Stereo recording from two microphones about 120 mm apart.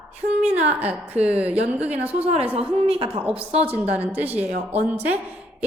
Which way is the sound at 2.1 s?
60° right (ahead or behind).